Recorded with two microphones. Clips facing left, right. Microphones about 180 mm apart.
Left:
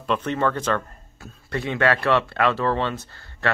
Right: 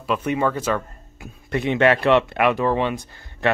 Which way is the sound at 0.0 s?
10° right (ahead or behind).